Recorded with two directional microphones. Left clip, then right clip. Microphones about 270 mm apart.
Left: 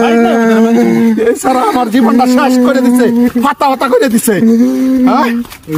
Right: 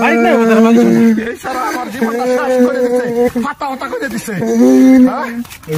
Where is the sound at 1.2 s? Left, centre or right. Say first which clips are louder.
Left 9 dB; left.